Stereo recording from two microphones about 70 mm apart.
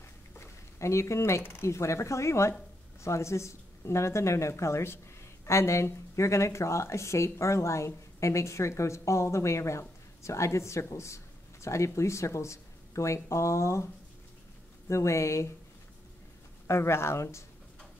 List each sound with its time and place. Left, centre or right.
0.4 s speech: left
14.9 s speech: left
16.6 s speech: left